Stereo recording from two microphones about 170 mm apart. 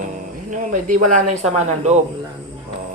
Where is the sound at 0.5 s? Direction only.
50° right (ahead or behind).